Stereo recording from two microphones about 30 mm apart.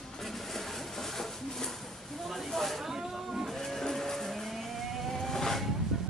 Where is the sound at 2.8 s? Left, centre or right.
Centre.